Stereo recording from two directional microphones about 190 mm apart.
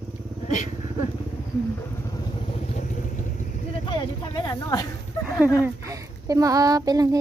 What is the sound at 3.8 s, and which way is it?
Speech, 25° left (ahead or behind).